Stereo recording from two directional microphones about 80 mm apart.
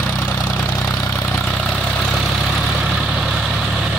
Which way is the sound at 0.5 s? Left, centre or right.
Centre.